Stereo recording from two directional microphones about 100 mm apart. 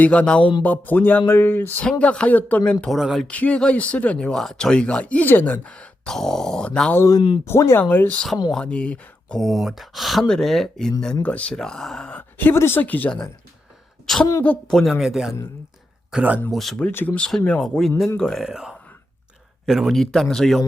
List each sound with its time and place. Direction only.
0.0 s speech: 10° left (ahead or behind)
2.8 s speech: centre (ahead or behind)
3.2 s speech: 10° left (ahead or behind)
7.4 s speech: 25° left (ahead or behind); by 9.5 s 10° left (ahead or behind)
9.5 s speech: centre (ahead or behind)
16.1 s speech: 15° right (ahead or behind)
16.5 s speech: centre (ahead or behind)
16.8 s speech: 15° left (ahead or behind); by 20.7 s centre (ahead or behind)